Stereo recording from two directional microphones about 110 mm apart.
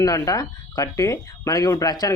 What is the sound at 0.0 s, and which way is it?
Speech, 30° left (ahead or behind).